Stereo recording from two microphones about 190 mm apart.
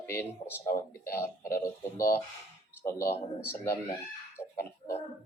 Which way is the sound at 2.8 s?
15° left (ahead or behind).